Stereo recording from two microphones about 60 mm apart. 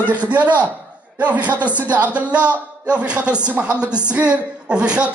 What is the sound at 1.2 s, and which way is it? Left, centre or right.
A woman's voice, right.